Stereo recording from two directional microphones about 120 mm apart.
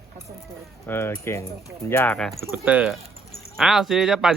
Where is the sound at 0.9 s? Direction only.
20° left (ahead or behind).